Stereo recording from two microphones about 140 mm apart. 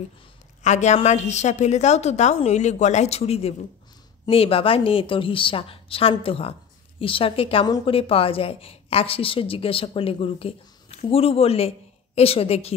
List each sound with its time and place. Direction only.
0.6 s a woman's voice: 55° left (ahead or behind)
7.6 s a woman's voice: 30° left (ahead or behind)
7.9 s a woman's voice: 40° left (ahead or behind)